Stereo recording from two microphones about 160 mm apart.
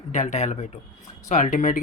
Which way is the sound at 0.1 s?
50° left (ahead or behind).